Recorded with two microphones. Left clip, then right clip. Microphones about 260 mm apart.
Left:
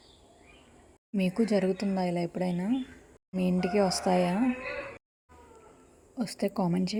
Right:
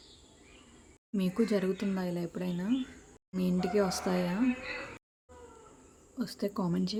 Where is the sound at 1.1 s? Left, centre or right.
Centre.